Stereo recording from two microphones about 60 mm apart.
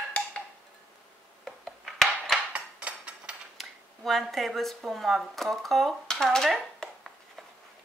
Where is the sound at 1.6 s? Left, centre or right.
Centre.